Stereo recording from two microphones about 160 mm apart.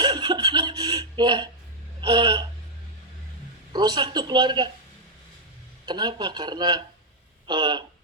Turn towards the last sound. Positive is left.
turn(degrees=-30)  # may be behind; listen again after turning